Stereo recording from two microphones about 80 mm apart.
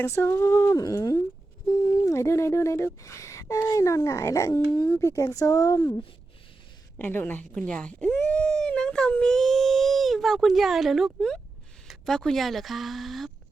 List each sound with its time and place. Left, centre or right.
0.0 s speech: left
0.8 s speech: left
1.7 s busy signal: left
2.0 s speech: left
7.0 s a woman's voice: left
7.5 s speech: centre